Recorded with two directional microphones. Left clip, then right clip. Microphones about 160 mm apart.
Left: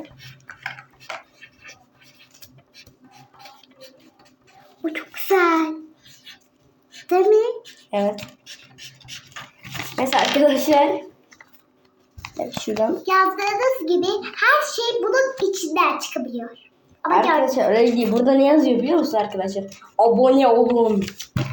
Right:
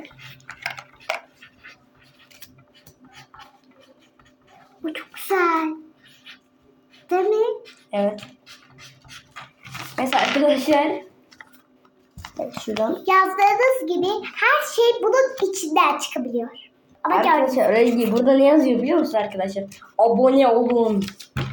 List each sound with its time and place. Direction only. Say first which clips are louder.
0.4 s dishes: right 2 dB; 55° right (ahead or behind)
4.8 s bathtub: left 3 dB; 5° right (ahead or behind)
7.1 s a sound: left 3 dB; centre (ahead or behind)
7.9 s speech: left 1 dB; 20° left (ahead or behind)
10.0 s a sound: left 2 dB; 20° left (ahead or behind)
12.5 s hands: left 2 dB; 5° left (ahead or behind)
13.1 s a child's voice: right 4 dB; 35° right (ahead or behind)
17.5 s a woman's voice: even; 5° left (ahead or behind)